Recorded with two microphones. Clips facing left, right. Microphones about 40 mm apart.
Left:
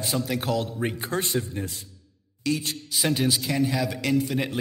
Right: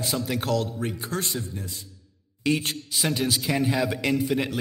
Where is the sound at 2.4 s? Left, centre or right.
Right.